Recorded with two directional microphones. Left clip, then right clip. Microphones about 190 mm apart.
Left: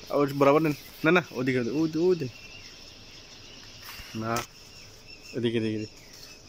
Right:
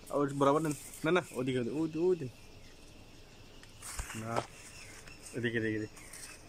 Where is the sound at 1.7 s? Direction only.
15° left (ahead or behind).